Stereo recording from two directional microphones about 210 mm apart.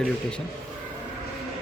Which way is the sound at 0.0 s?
5° left (ahead or behind).